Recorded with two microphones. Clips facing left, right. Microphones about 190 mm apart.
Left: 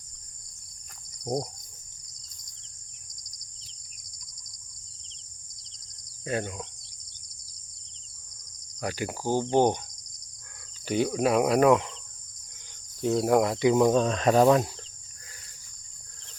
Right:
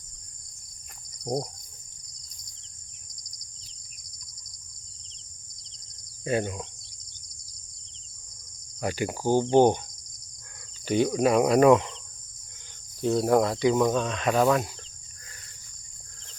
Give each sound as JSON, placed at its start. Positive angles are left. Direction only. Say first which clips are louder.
{"t": 1.2, "sound": "cricket", "louder": "even", "side_deg": 5}
{"t": 6.2, "sound": "speech", "louder": "right 4 dB", "side_deg": -5}
{"t": 8.8, "sound": "speech", "louder": "right 3 dB", "side_deg": 0}
{"t": 10.8, "sound": "speech", "louder": "right 2 dB", "side_deg": 5}
{"t": 13.0, "sound": "speech", "louder": "right 1 dB", "side_deg": 5}
{"t": 13.4, "sound": "speech", "louder": "left 1 dB", "side_deg": 20}
{"t": 13.9, "sound": "speech", "louder": "left 3 dB", "side_deg": 35}